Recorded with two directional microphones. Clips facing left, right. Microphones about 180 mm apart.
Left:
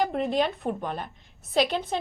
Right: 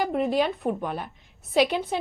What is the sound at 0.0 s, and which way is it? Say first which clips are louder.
Speech: right 1 dB; 5° right (ahead or behind).